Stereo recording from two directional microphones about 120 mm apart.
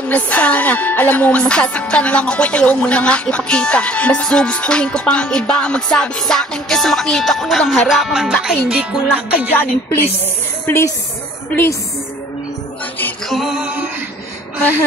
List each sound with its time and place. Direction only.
0.1 s music: 10° left (ahead or behind); by 9.5 s 10° right (ahead or behind)
9.5 s music: 15° left (ahead or behind)
13.3 s music: centre (ahead or behind)